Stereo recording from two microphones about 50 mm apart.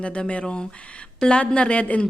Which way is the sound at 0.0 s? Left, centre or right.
Left.